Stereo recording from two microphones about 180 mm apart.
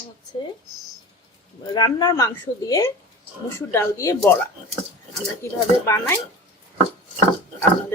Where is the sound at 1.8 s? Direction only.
25° left (ahead or behind).